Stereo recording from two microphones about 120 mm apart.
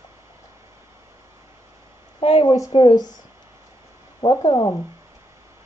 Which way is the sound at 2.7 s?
50° left (ahead or behind).